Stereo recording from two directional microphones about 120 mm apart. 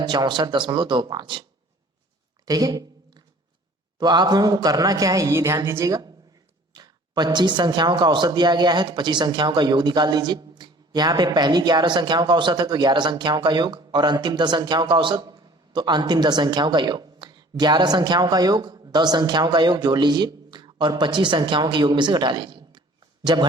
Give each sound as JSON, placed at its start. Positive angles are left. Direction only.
{"t": 0.0, "sound": "speech", "side_deg": -35}
{"t": 2.4, "sound": "a sound", "side_deg": -30}
{"t": 3.9, "sound": "speech", "side_deg": -35}